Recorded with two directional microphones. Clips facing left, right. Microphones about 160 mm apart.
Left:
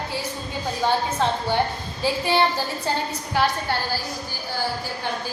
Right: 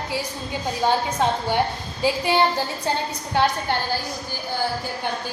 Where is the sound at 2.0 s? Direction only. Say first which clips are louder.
Right 1 dB; 15° right (ahead or behind).